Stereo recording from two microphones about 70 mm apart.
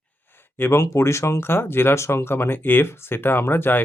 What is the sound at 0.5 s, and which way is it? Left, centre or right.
Speech, left.